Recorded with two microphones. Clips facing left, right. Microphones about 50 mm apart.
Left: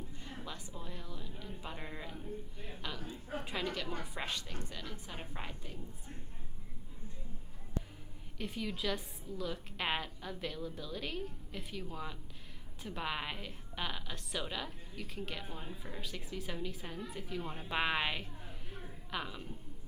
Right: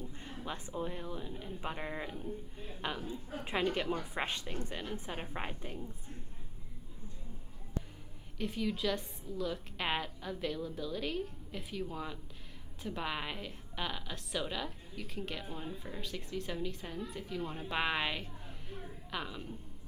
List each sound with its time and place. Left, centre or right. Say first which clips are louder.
0.2 s a woman's voice: right 4 dB; right
3.1 s a woman's voice: even; left
3.4 s a woman's voice: right 7 dB; right
8.4 s a woman's voice: right 4 dB; centre